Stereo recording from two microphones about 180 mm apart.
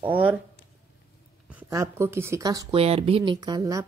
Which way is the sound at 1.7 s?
15° right (ahead or behind).